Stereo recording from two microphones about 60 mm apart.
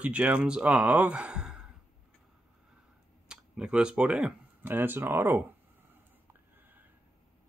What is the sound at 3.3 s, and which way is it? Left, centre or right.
Speech, centre.